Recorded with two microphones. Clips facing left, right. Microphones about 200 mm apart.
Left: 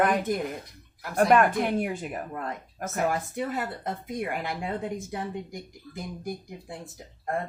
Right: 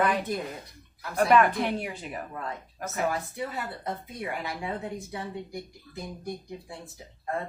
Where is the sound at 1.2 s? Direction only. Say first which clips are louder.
Left 1 dB; 50° left (ahead or behind).